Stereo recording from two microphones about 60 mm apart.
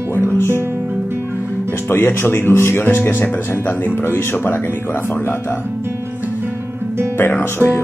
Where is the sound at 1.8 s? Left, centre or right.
Left.